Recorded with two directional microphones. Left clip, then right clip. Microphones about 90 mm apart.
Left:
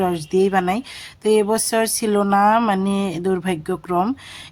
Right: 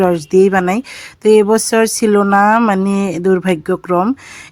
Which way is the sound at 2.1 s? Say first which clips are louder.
Right 4 dB; 45° right (ahead or behind).